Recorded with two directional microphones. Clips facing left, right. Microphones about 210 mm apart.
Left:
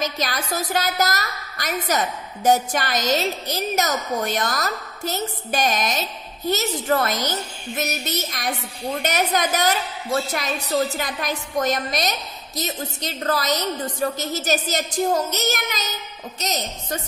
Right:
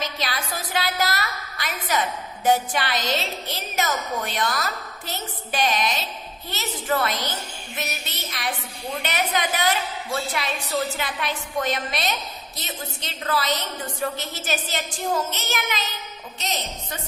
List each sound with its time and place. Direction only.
0.0 s a woman's voice: 45° left (ahead or behind)